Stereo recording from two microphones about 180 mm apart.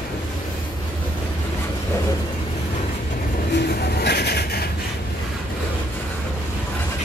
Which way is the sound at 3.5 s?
65° left (ahead or behind).